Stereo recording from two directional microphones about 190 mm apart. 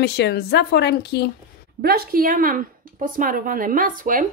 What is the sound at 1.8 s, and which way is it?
Speech, 50° right (ahead or behind).